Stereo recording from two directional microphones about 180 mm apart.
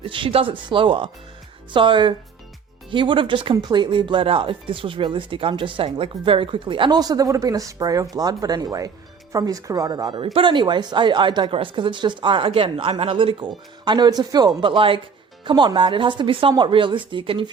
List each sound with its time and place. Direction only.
0.0 s speech: 30° right (ahead or behind)